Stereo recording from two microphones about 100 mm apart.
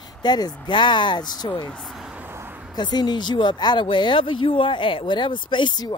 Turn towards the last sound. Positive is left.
turn(degrees=50)  # may be behind; listen again after turning